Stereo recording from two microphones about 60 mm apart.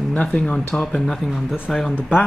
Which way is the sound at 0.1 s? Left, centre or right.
Left.